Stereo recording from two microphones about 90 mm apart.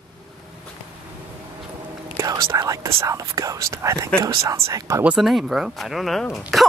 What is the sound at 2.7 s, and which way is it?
Speech, 35° right (ahead or behind).